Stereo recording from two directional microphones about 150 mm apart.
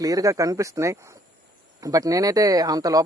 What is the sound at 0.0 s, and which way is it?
Speech, 25° right (ahead or behind).